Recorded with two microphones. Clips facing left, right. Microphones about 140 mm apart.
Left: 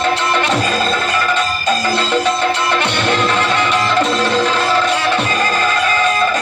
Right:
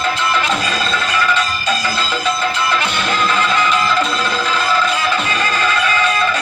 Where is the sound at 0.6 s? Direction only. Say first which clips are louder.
Left 3 dB; 45° left (ahead or behind).